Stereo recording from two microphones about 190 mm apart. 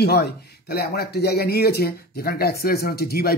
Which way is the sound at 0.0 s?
60° left (ahead or behind).